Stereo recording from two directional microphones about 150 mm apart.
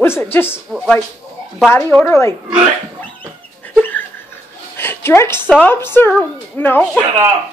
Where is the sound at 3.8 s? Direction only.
15° left (ahead or behind).